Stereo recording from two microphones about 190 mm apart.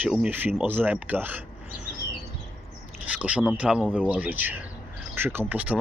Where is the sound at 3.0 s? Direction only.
5° right (ahead or behind).